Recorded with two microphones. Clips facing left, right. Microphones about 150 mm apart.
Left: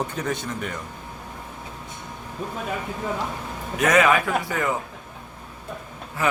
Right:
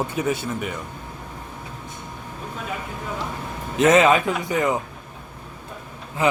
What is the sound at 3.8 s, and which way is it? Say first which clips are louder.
Speech: right 3 dB; 25° right (ahead or behind).